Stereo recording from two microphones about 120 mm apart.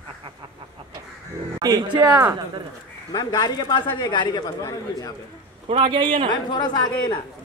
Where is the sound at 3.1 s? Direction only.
35° left (ahead or behind).